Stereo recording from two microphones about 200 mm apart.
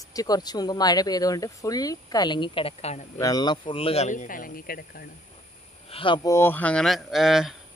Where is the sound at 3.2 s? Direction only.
20° left (ahead or behind); by 5.0 s 45° left (ahead or behind).